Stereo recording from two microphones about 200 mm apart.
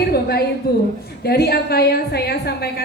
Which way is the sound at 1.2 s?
55° left (ahead or behind).